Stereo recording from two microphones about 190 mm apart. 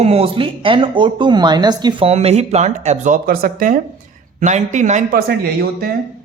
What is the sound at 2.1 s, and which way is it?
Speech, 35° right (ahead or behind).